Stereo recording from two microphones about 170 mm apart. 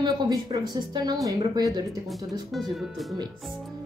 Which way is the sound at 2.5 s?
Centre (ahead or behind).